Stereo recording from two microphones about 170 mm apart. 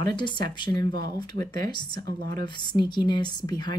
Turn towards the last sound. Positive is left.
turn(degrees=25)  # may be behind; listen again after turning